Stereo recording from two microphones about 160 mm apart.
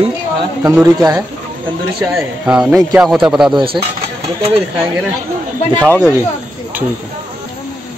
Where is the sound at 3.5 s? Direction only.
35° right (ahead or behind).